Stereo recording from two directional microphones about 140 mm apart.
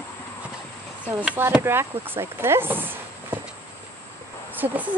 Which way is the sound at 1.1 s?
15° right (ahead or behind).